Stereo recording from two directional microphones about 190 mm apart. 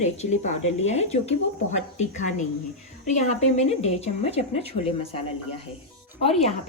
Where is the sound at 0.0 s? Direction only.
35° left (ahead or behind).